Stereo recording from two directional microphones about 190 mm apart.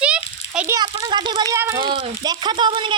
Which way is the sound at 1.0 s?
25° right (ahead or behind).